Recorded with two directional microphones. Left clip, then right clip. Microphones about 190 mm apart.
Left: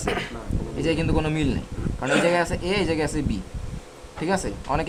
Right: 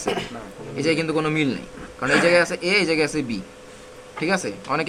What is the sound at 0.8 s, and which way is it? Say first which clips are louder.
Speech: right 3 dB; 25° left (ahead or behind).